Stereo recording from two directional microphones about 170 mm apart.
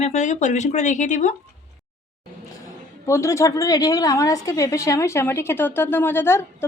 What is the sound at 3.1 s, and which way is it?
A woman's voice, 20° left (ahead or behind).